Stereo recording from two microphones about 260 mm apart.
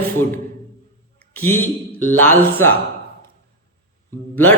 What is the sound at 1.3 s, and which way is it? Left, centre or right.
Speech, centre.